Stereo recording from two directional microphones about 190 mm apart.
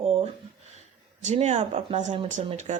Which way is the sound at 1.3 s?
40° right (ahead or behind).